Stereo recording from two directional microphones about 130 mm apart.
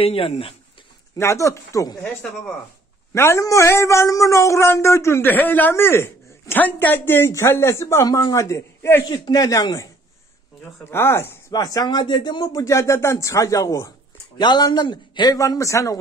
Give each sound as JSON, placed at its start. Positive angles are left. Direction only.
{"t": 0.0, "sound": "speech", "side_deg": 45}
{"t": 1.1, "sound": "a man's voice", "side_deg": 25}
{"t": 3.2, "sound": "a man's voice", "side_deg": 25}
{"t": 10.8, "sound": "speech", "side_deg": 20}
{"t": 11.5, "sound": "a man's voice", "side_deg": 30}